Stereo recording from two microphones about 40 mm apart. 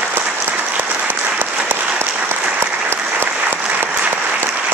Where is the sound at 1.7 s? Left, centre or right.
Right.